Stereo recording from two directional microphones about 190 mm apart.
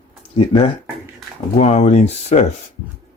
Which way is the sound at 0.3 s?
25° left (ahead or behind).